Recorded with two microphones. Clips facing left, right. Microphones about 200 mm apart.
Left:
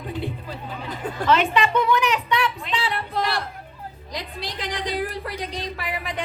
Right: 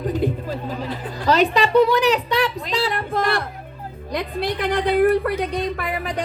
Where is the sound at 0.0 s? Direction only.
40° right (ahead or behind).